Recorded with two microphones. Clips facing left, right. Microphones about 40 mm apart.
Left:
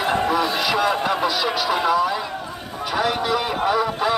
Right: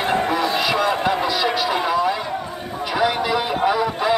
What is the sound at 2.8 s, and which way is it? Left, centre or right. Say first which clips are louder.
Vehicle: right 2 dB; centre.